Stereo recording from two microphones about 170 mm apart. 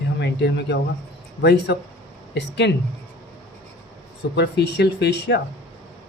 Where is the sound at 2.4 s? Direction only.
90° left.